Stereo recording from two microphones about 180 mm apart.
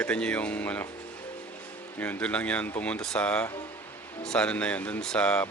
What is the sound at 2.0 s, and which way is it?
Speech, 10° left (ahead or behind).